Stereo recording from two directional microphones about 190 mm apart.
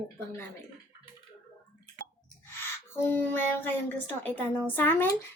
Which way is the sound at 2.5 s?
10° left (ahead or behind).